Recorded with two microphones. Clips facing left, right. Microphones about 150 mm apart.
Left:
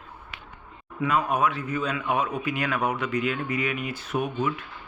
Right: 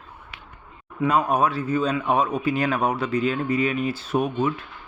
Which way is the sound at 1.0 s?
35° right (ahead or behind).